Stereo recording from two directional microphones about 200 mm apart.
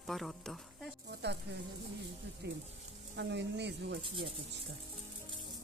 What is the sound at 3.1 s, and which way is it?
Speech, 60° right (ahead or behind).